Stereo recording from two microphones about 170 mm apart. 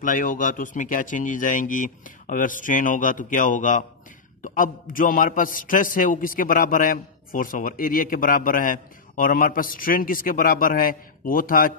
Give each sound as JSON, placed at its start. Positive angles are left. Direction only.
{"t": 0.0, "sound": "a man's voice", "side_deg": 50}